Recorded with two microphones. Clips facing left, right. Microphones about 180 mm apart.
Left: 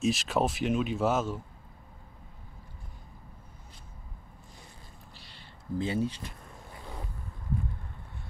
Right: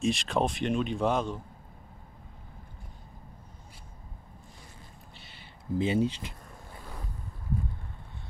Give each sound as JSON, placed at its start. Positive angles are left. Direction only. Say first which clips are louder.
{"t": 0.0, "sound": "speech", "louder": "even", "side_deg": 5}
{"t": 5.1, "sound": "a sound", "louder": "right 1 dB", "side_deg": -5}
{"t": 5.8, "sound": "speech", "louder": "right 3 dB", "side_deg": -25}